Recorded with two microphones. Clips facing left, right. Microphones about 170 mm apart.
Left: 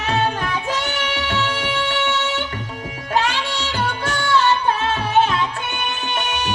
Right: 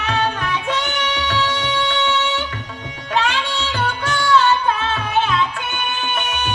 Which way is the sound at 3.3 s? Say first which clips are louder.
Right 1 dB; 35° left (ahead or behind).